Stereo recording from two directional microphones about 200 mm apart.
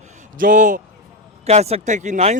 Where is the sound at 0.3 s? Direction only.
40° right (ahead or behind).